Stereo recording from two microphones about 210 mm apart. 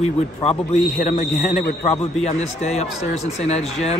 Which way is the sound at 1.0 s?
40° left (ahead or behind).